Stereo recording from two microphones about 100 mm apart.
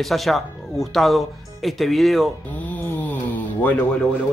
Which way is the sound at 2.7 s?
15° left (ahead or behind).